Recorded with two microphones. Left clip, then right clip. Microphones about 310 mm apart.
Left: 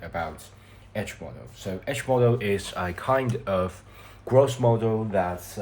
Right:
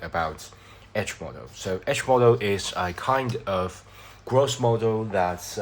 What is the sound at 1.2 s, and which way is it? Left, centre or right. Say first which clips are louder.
Speech: right 3 dB; right.